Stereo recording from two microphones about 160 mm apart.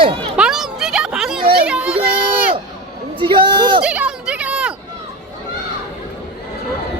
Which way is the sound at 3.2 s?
30° right (ahead or behind).